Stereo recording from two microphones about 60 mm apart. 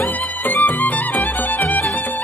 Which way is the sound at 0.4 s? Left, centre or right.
Left.